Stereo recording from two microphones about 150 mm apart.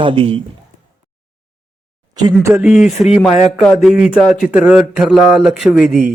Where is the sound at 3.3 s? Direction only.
45° left (ahead or behind).